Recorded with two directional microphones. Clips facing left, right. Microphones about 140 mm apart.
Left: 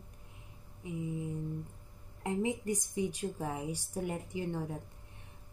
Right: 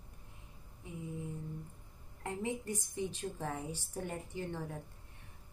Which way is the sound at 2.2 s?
15° left (ahead or behind).